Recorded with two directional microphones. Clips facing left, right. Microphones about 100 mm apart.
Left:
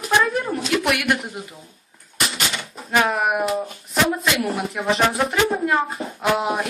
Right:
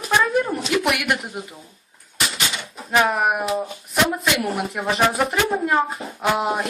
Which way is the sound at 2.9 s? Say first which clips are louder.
Right 1 dB; centre (ahead or behind).